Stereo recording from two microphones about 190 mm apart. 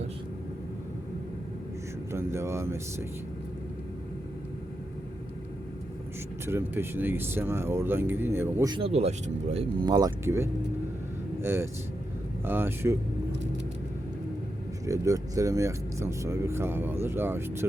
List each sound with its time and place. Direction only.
2.1 s speech: 15° right (ahead or behind)
6.4 s speech: 10° right (ahead or behind)
8.7 s speech: 30° right (ahead or behind)
9.9 s speech: 15° right (ahead or behind)
14.8 s speech: 15° right (ahead or behind)